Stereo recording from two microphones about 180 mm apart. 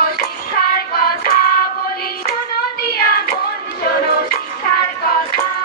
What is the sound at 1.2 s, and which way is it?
Hands, 55° left (ahead or behind).